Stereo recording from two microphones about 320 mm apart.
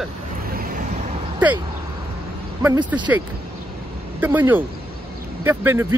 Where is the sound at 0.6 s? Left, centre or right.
Right.